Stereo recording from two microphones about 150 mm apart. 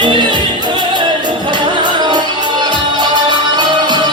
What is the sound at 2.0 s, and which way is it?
Music, 30° right (ahead or behind).